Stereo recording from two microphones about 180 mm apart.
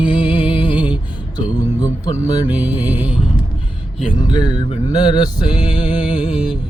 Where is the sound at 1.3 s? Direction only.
20° left (ahead or behind).